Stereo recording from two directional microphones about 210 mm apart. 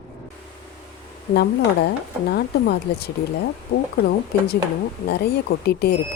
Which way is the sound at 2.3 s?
50° left (ahead or behind).